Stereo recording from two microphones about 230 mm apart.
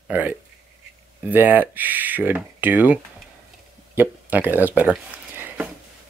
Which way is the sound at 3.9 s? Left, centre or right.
Centre.